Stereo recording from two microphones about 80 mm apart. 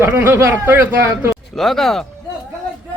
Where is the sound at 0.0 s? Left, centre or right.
Right.